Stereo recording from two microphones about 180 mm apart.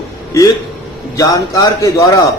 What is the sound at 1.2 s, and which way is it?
Speech, 20° left (ahead or behind).